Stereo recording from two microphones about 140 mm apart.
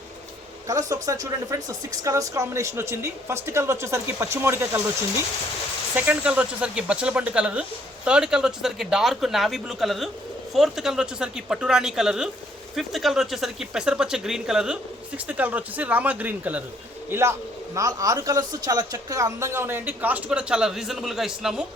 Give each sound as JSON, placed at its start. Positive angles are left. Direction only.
{"t": 0.7, "sound": "speech", "side_deg": -25}
{"t": 6.1, "sound": "speech", "side_deg": -10}